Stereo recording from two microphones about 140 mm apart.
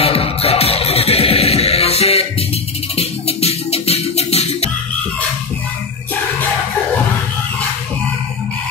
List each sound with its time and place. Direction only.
0.0 s music: 45° left (ahead or behind)